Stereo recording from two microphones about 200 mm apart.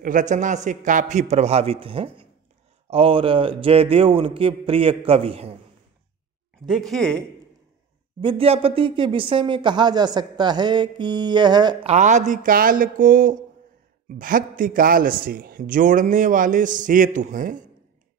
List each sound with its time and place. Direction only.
0.0 s a man's voice: 40° right (ahead or behind)
6.7 s speech: centre (ahead or behind)
8.2 s speech: 25° right (ahead or behind)
11.9 s a man's voice: 35° right (ahead or behind)